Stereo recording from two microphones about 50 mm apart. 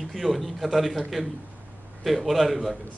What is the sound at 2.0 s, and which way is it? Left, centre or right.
Speech, centre.